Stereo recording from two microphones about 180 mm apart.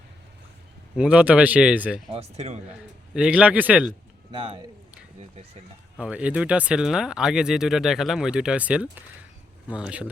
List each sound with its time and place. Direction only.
0.9 s speech: 5° right (ahead or behind)
2.1 s speech: 35° right (ahead or behind)
3.2 s speech: 5° right (ahead or behind)
4.3 s speech: 30° right (ahead or behind)
6.0 s speech: 5° right (ahead or behind)